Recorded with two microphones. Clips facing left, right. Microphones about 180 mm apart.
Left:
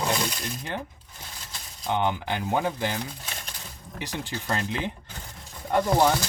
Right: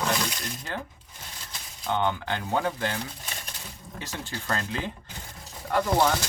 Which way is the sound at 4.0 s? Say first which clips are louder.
Left 3 dB; 15° left (ahead or behind).